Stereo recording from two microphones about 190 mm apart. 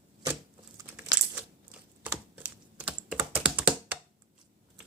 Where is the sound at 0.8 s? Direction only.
15° right (ahead or behind).